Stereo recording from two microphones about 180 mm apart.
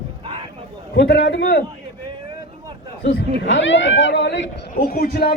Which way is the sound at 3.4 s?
90° left.